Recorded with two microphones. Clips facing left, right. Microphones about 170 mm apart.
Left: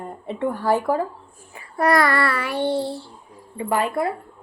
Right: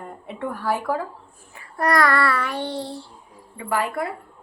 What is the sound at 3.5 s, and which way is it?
Speech, 25° left (ahead or behind).